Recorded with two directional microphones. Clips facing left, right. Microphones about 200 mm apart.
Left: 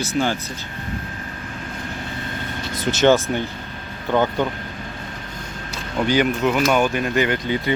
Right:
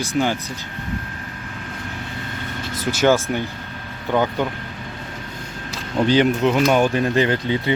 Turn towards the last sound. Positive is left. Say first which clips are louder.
# right 1 dB
turn(degrees=-30)  # may be behind; listen again after turning